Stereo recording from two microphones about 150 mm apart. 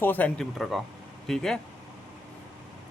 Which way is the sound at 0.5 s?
Centre (ahead or behind).